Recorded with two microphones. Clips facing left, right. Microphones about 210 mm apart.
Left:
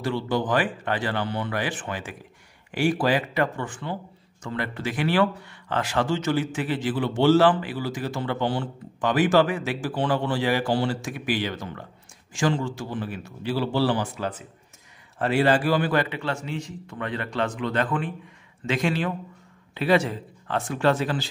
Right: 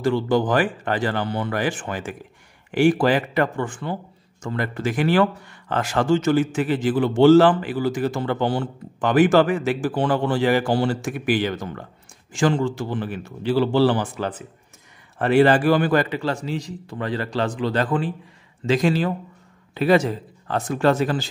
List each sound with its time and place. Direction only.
0.0 s a man's voice: 45° right (ahead or behind)